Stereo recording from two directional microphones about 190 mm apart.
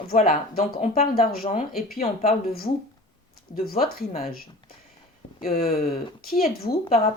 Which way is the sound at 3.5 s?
50° left (ahead or behind).